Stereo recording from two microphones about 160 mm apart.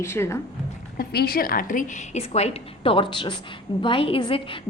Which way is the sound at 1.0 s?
70° left (ahead or behind).